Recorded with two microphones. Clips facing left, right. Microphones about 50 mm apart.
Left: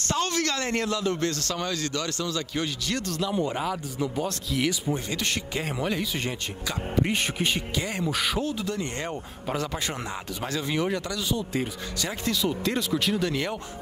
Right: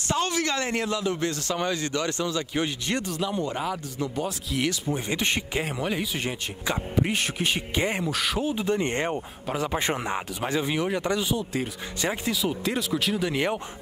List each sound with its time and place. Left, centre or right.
0.0 s a man's voice: centre
3.5 s speech: centre
5.0 s speech: right
5.7 s a man's voice: centre
7.7 s speech: right
8.0 s speech: centre
8.5 s speech: right
11.3 s speech: centre
13.3 s speech: right